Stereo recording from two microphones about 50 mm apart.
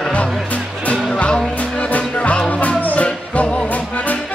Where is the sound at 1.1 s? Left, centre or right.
Centre.